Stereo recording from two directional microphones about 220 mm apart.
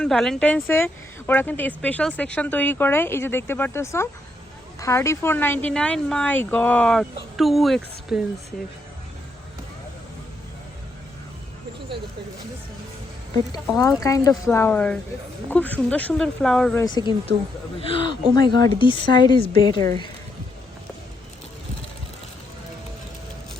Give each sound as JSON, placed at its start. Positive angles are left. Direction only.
{"t": 0.0, "sound": "speech", "side_deg": 0}
{"t": 14.0, "sound": "speech", "side_deg": 15}
{"t": 16.8, "sound": "a woman's voice", "side_deg": 20}